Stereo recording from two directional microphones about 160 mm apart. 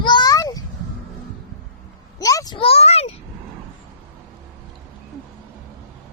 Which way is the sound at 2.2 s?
20° left (ahead or behind).